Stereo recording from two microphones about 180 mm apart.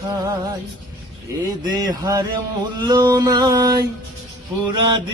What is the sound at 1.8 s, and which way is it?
Mantra, 20° right (ahead or behind).